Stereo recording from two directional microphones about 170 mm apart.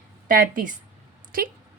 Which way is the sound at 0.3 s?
55° right (ahead or behind).